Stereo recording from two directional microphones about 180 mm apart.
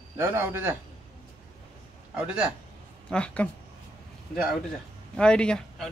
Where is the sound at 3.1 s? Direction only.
5° left (ahead or behind).